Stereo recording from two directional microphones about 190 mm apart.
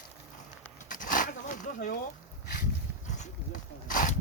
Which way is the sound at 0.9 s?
45° left (ahead or behind).